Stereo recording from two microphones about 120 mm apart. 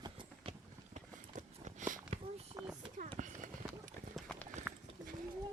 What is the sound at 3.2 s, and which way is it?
Clip-clop, 90° right.